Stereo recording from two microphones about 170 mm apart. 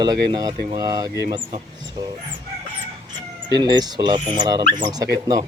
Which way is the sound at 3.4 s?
25° right (ahead or behind).